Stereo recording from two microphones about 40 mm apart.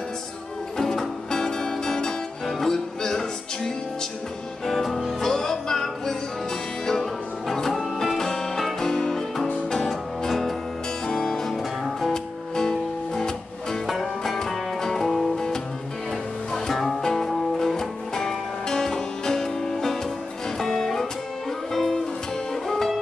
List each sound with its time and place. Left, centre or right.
0.7 s music: centre
8.2 s music: centre
11.1 s music: centre
13.8 s music: centre
14.4 s music: centre
15.3 s music: centre